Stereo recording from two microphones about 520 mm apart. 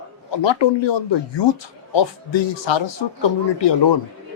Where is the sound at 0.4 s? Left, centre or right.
Left.